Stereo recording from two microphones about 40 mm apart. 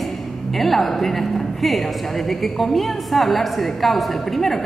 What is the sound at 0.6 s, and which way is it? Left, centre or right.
A woman's voice, centre.